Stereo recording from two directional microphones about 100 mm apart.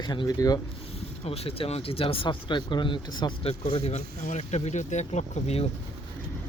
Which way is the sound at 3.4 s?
80° left.